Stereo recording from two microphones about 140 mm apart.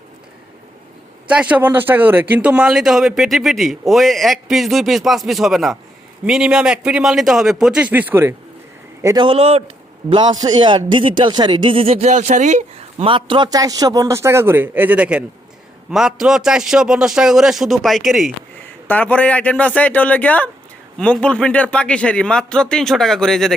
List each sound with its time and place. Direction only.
1.3 s speech: 10° right (ahead or behind)
9.1 s a man's voice: 35° right (ahead or behind)
10.1 s a man's voice: 30° right (ahead or behind); by 13.1 s 55° right (ahead or behind)
13.1 s a man's voice: 35° right (ahead or behind); by 18.3 s centre (ahead or behind)
18.9 s speech: 10° left (ahead or behind)